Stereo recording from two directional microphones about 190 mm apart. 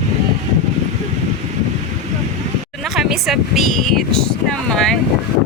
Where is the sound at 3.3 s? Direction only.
Centre (ahead or behind).